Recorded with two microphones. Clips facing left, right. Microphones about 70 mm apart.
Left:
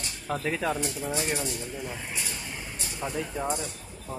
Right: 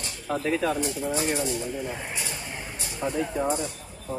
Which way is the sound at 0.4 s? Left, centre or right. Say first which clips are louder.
Right 5 dB; centre.